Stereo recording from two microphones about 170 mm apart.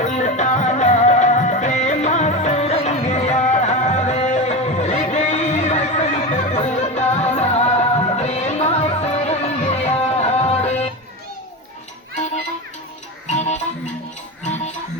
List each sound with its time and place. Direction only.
0.0 s music: 45° left (ahead or behind)
12.1 s music: 40° left (ahead or behind)